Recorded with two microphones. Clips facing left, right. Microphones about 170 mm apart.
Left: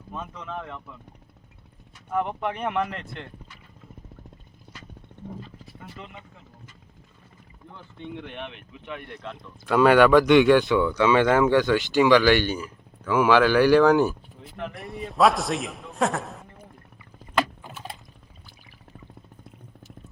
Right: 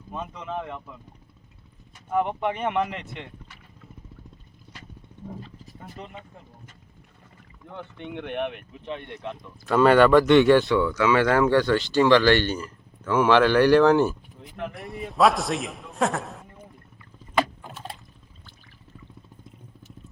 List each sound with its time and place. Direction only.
0.1 s speech: 10° right (ahead or behind)
2.0 s a man's voice: centre (ahead or behind)
5.6 s speech: 45° right (ahead or behind)
7.7 s speech: 70° right (ahead or behind)
8.8 s speech: 30° right (ahead or behind)
9.6 s a man's voice: centre (ahead or behind)
10.9 s a man's voice: 20° left (ahead or behind); by 16.5 s centre (ahead or behind)
17.3 s rowboat: 5° left (ahead or behind)